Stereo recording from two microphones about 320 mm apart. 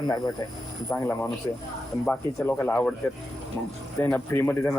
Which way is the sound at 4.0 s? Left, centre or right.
Centre.